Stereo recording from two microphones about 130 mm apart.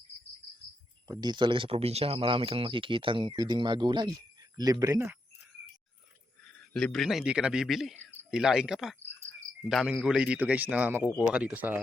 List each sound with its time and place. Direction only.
1.0 s speech: 30° right (ahead or behind)
6.7 s a man's voice: centre (ahead or behind)